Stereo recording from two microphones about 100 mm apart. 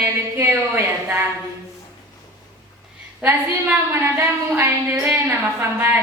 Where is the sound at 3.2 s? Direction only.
15° right (ahead or behind).